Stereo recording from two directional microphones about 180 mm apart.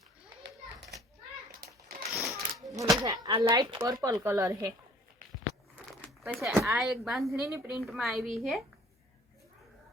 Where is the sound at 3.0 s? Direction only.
20° right (ahead or behind).